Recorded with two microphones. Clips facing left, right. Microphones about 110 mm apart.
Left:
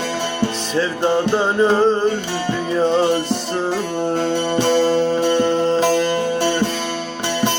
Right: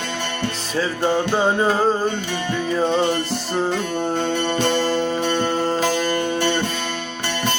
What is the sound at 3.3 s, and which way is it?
Music, 5° left (ahead or behind).